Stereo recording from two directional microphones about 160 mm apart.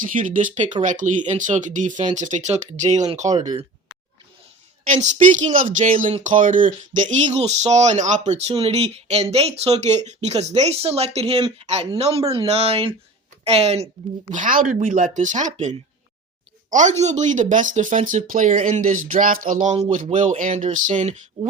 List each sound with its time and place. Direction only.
0.0 s speech: 55° right (ahead or behind)
3.3 s speech: 25° right (ahead or behind)
4.9 s speech: 45° right (ahead or behind)
14.3 s speech: 55° right (ahead or behind)
16.7 s speech: 45° right (ahead or behind)